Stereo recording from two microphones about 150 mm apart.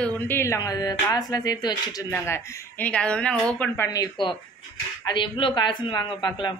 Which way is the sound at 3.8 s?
25° left (ahead or behind).